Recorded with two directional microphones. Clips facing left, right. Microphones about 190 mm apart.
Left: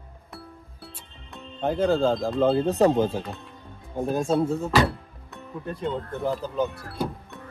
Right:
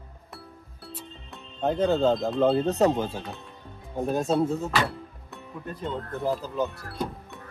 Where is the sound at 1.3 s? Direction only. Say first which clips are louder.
Even; centre (ahead or behind).